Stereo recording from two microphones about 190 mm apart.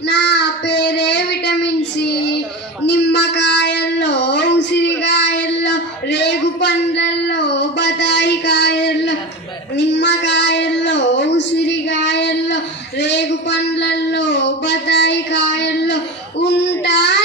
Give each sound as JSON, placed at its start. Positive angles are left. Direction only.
{"t": 0.1, "sound": "child singing", "side_deg": 65}